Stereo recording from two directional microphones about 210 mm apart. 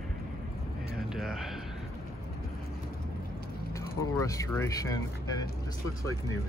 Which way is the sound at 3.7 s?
15° left (ahead or behind).